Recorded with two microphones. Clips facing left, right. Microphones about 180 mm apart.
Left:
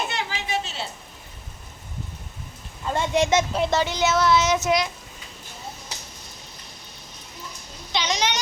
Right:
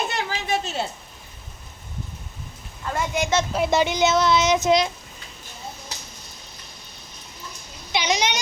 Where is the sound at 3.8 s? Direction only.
15° right (ahead or behind).